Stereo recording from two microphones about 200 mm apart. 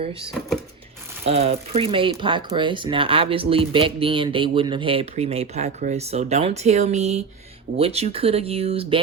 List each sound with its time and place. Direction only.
1.2 s speech: 30° right (ahead or behind)